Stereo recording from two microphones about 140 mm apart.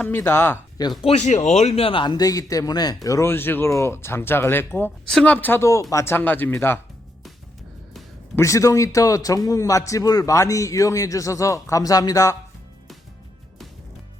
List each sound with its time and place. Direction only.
0.0 s speech: 15° left (ahead or behind)
1.0 s a man's voice: 50° left (ahead or behind); by 6.7 s 15° left (ahead or behind)
8.4 s a man's voice: 25° left (ahead or behind)